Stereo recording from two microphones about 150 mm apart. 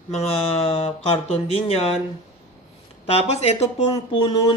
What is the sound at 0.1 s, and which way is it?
Speech, 40° left (ahead or behind).